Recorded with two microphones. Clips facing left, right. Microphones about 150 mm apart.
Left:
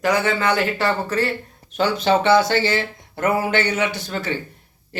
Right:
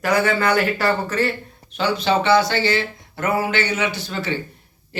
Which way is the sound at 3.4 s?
50° left (ahead or behind).